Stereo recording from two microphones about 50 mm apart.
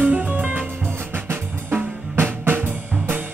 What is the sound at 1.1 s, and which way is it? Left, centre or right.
Drum kit, right.